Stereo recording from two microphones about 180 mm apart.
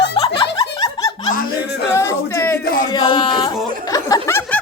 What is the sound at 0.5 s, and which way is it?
Snicker, 20° left (ahead or behind).